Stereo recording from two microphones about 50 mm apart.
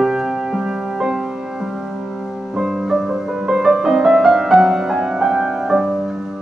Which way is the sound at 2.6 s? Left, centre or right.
Centre.